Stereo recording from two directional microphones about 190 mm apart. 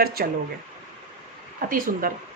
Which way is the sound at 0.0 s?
55° right (ahead or behind).